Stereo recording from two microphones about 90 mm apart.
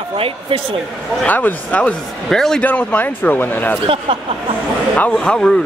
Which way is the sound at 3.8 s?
90° right.